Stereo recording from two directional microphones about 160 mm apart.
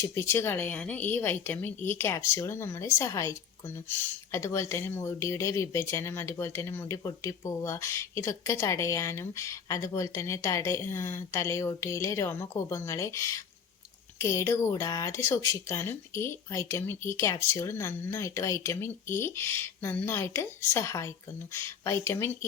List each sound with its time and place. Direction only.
0.0 s speech: 15° left (ahead or behind)